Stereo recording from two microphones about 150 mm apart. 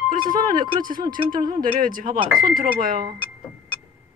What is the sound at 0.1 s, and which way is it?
Speech, 65° right (ahead or behind).